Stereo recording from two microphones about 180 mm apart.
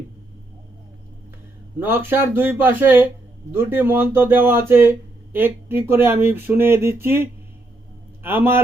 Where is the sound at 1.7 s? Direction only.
10° right (ahead or behind).